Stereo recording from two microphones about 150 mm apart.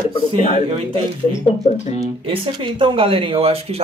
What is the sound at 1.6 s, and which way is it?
Speech, 50° left (ahead or behind).